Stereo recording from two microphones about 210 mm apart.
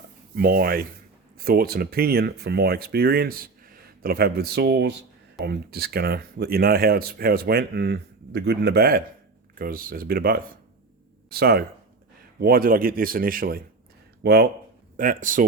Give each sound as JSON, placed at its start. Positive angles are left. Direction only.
{"t": 0.3, "sound": "speech", "side_deg": -45}
{"t": 14.9, "sound": "speech", "side_deg": -40}